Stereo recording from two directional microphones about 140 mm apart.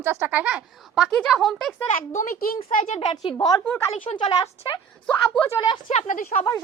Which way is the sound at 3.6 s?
15° left (ahead or behind).